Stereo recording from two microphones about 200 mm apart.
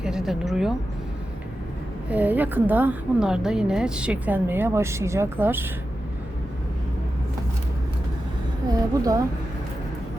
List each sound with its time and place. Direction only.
0.0 s speech: 5° right (ahead or behind)
2.0 s a woman's voice: 10° right (ahead or behind)
8.7 s a woman's voice: 15° right (ahead or behind)